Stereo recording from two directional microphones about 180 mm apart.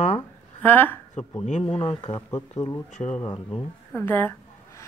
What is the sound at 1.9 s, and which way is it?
A woman's voice, 20° left (ahead or behind).